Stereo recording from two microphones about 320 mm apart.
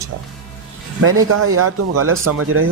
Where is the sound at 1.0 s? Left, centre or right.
Right.